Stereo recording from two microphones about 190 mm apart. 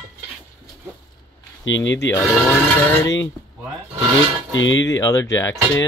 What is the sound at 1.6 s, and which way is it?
Speech, 75° left (ahead or behind).